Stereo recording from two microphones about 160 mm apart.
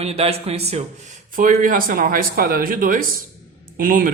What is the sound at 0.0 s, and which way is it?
Speech, 40° right (ahead or behind).